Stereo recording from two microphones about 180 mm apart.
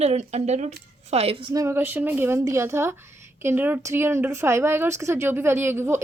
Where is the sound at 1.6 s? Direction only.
15° right (ahead or behind).